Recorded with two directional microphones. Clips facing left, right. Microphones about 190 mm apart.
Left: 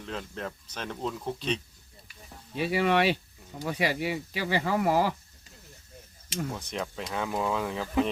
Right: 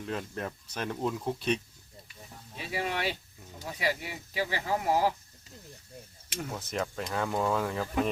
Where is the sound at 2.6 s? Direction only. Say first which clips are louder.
Left 9 dB; 75° left (ahead or behind).